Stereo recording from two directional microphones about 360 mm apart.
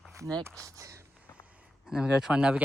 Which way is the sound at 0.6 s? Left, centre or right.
Centre.